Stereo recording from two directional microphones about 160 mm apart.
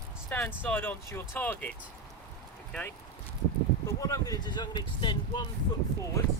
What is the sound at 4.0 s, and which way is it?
Speech, 20° left (ahead or behind).